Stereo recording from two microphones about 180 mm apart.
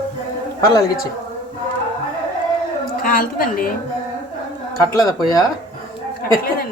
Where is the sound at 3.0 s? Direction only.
50° left (ahead or behind).